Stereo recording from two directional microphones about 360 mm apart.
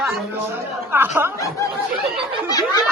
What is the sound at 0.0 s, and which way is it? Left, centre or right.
Chatter, centre.